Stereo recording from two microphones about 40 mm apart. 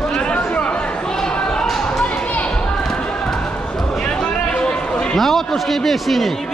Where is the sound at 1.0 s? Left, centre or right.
Centre.